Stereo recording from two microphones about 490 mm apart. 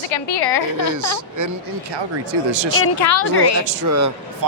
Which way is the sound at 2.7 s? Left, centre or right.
Left.